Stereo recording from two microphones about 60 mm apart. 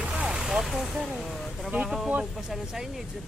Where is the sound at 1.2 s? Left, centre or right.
Centre.